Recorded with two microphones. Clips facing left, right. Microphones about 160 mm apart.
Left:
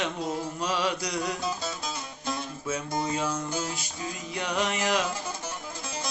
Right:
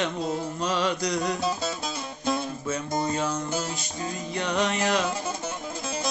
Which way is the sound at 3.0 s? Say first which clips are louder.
Right 2 dB; 10° left (ahead or behind).